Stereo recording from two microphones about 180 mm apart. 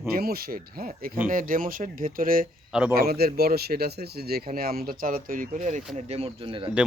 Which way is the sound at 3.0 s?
60° right (ahead or behind).